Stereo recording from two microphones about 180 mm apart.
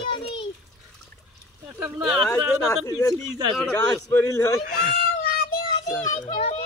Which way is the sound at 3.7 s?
15° left (ahead or behind).